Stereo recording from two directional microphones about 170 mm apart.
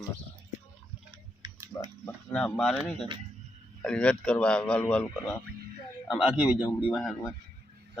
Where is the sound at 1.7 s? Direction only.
25° left (ahead or behind).